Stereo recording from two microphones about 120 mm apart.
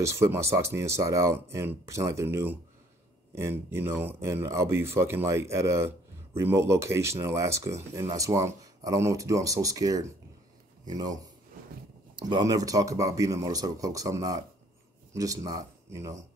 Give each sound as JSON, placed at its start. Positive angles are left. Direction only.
{"t": 0.0, "sound": "speech", "side_deg": -25}
{"t": 12.2, "sound": "speech", "side_deg": -35}